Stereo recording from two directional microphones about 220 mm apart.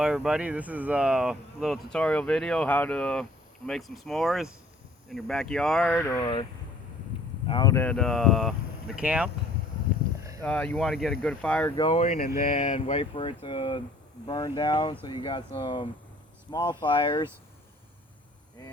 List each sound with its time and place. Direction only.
0.0 s speech: 5° right (ahead or behind); by 6.4 s 20° left (ahead or behind)
7.4 s speech: 20° left (ahead or behind); by 9.3 s 5° right (ahead or behind)
10.4 s speech: 5° left (ahead or behind)
11.8 s speech: 25° left (ahead or behind)